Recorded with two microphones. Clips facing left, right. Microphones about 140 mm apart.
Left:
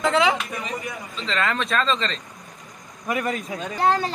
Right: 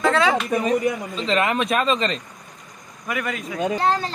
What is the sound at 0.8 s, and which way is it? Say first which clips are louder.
Speech: right 8 dB; 20° right (ahead or behind).